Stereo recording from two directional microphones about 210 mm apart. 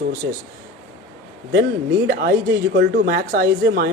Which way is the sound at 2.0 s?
45° right (ahead or behind).